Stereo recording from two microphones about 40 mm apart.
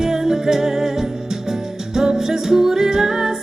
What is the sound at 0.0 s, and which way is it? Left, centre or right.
Music, centre.